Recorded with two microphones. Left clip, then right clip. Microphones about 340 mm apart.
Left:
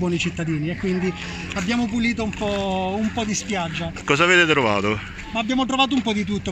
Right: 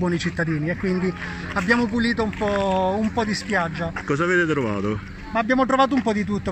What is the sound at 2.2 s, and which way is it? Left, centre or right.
Speech, centre.